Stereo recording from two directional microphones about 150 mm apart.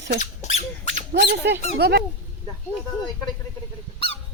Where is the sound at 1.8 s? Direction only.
90° right.